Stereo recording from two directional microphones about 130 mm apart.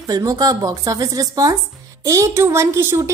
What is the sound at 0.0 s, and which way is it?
A woman's voice, 30° right (ahead or behind).